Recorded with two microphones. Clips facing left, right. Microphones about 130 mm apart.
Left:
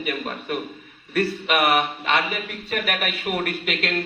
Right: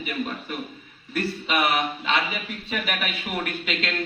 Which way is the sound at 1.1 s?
60° left (ahead or behind).